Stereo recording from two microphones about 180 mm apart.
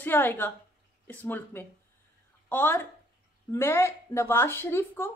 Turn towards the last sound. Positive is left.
turn(degrees=15)  # may be behind; listen again after turning